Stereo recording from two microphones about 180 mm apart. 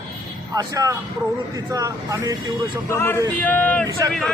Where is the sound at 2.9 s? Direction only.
10° left (ahead or behind).